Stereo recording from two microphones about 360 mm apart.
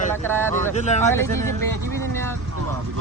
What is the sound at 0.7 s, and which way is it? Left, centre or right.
Speech, centre.